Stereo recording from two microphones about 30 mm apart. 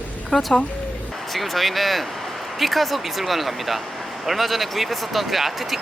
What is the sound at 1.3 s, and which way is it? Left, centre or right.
Speech, centre.